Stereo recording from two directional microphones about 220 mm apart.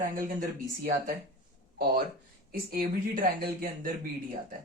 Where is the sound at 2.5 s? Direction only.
40° right (ahead or behind).